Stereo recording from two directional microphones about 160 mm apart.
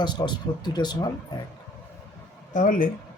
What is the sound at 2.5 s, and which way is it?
Speech, 55° left (ahead or behind).